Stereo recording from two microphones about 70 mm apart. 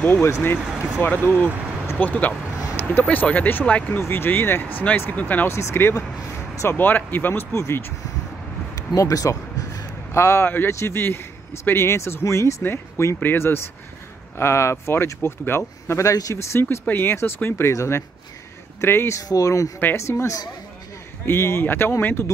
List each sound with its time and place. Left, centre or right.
0.0 s speech: left
0.7 s speech: centre
1.0 s speech: left
4.0 s speech: left
5.5 s speech: left
8.7 s a sound: left
10.1 s speech: left
16.1 s speech: left
16.5 s speech: left
19.2 s speech: left